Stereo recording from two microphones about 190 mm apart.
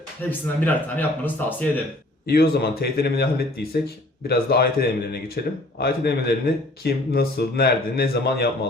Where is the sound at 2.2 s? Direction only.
55° left (ahead or behind).